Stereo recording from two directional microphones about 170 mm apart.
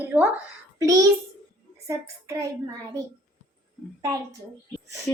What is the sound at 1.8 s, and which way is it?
Speech, 20° right (ahead or behind).